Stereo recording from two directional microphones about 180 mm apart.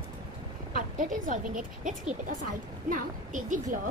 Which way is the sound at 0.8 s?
50° right (ahead or behind).